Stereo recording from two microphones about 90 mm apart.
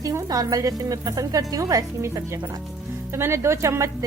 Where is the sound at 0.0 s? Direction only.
40° right (ahead or behind).